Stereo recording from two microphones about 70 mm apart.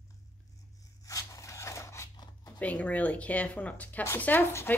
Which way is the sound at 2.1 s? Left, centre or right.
Left.